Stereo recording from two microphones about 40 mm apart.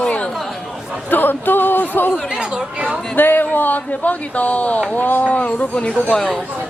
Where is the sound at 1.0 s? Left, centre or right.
Left.